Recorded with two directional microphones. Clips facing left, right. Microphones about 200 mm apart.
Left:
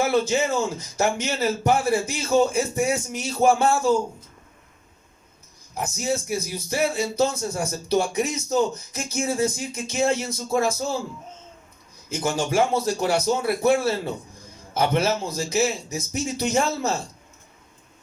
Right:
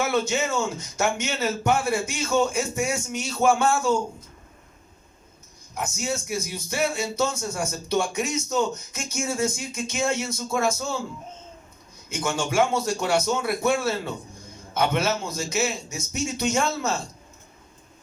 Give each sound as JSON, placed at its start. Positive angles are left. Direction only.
{"t": 0.0, "sound": "speech", "side_deg": 35}
{"t": 5.7, "sound": "speech", "side_deg": 35}
{"t": 12.0, "sound": "speech", "side_deg": 35}